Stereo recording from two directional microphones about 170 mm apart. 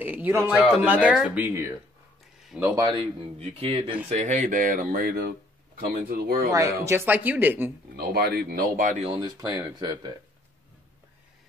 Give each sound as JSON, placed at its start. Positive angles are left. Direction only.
{"t": 0.0, "sound": "speech", "side_deg": -10}
{"t": 2.7, "sound": "speech", "side_deg": -25}
{"t": 4.1, "sound": "speech", "side_deg": -45}
{"t": 6.5, "sound": "speech", "side_deg": -15}
{"t": 7.9, "sound": "speech", "side_deg": -70}
{"t": 9.1, "sound": "speech", "side_deg": -25}